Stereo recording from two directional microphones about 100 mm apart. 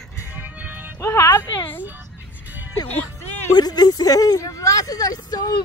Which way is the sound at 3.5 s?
40° left (ahead or behind).